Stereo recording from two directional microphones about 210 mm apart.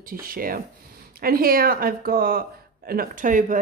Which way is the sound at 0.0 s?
45° right (ahead or behind).